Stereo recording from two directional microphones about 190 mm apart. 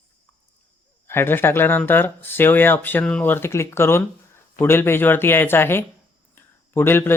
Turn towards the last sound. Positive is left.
turn(degrees=10)  # may be behind; listen again after turning